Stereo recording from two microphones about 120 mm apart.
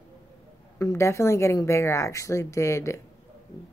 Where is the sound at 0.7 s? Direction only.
25° left (ahead or behind).